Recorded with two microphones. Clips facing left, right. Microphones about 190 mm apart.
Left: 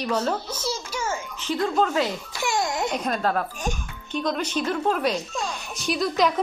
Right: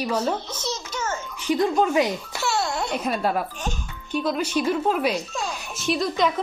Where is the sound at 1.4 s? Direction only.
15° right (ahead or behind).